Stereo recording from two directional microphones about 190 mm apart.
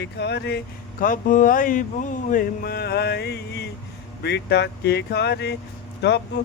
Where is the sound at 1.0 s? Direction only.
45° left (ahead or behind).